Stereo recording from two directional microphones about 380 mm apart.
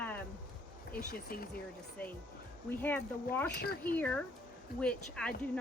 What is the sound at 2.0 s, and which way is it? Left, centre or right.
Speech, centre.